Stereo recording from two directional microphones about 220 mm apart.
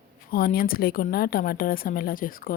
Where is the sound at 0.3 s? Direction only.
40° left (ahead or behind).